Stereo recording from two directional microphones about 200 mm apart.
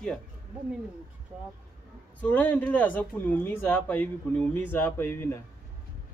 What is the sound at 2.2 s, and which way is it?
Speech, 10° left (ahead or behind).